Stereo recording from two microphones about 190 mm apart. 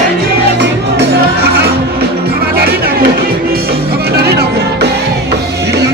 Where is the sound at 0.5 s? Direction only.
65° right (ahead or behind).